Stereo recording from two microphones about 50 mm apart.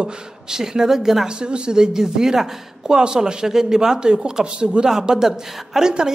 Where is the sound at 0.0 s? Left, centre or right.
Centre.